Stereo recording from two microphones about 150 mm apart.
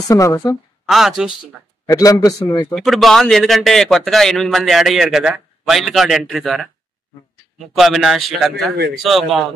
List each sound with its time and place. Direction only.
0.1 s a man's voice: 20° left (ahead or behind)
0.8 s a man's voice: centre (ahead or behind)
1.9 s a man's voice: 20° left (ahead or behind)
2.7 s a man's voice: centre (ahead or behind)